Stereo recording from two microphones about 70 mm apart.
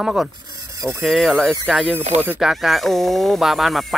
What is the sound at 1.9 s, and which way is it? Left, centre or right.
Speech, right.